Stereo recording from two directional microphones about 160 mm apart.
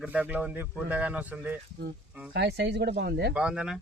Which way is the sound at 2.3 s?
90° right.